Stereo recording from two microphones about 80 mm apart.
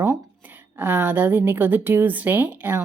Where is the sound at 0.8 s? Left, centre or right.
Right.